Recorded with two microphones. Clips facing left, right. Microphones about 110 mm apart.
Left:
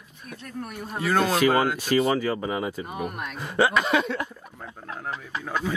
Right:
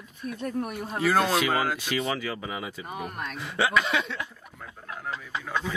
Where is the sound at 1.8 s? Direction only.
40° left (ahead or behind).